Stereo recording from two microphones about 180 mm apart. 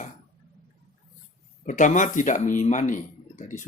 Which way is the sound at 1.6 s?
45° left (ahead or behind).